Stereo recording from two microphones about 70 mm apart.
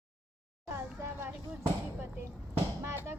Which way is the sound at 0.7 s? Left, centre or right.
Right.